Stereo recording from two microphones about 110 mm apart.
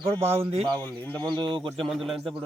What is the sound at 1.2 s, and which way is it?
Speech, 45° right (ahead or behind).